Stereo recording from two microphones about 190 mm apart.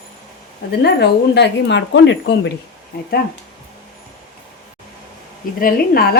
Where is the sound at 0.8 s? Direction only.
60° left (ahead or behind).